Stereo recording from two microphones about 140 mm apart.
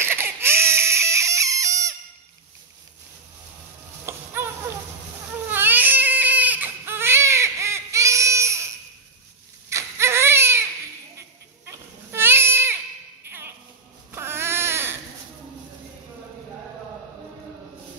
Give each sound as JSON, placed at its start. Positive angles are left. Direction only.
{"t": 0.0, "sound": "crying", "side_deg": -15}
{"t": 4.0, "sound": "a sound", "side_deg": -20}
{"t": 5.5, "sound": "baby cry", "side_deg": -15}
{"t": 9.7, "sound": "baby cry", "side_deg": -20}
{"t": 13.2, "sound": "a sound", "side_deg": -15}
{"t": 14.1, "sound": "baby cry", "side_deg": -15}